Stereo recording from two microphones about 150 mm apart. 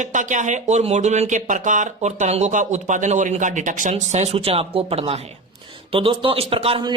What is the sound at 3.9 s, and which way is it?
Speech, 45° right (ahead or behind).